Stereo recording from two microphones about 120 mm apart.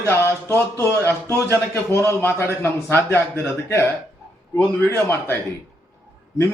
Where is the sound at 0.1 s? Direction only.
20° left (ahead or behind).